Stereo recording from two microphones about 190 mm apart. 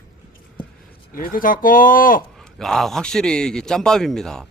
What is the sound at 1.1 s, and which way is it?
Speech, 50° left (ahead or behind).